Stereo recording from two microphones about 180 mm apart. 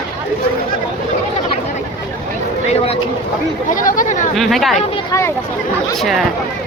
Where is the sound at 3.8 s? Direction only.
45° left (ahead or behind).